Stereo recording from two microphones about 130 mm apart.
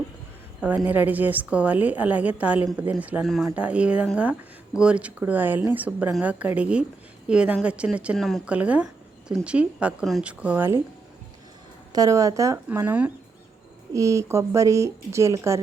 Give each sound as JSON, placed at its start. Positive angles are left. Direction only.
{"t": 0.9, "sound": "a woman's voice", "side_deg": -10}
{"t": 11.9, "sound": "a woman's voice", "side_deg": -30}
{"t": 13.9, "sound": "speech", "side_deg": -25}